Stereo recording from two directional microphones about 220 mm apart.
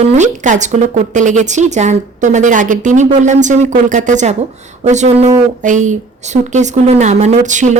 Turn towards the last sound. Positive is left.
turn(degrees=-35)  # may be behind; listen again after turning